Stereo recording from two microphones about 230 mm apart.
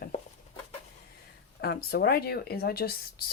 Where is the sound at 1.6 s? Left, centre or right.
Left.